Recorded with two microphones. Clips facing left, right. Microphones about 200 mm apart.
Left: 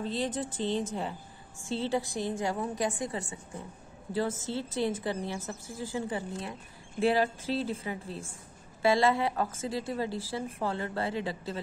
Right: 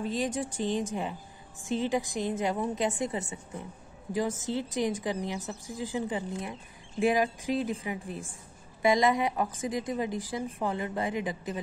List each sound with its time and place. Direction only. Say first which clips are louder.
0.0 s speech: right 1 dB; 15° right (ahead or behind)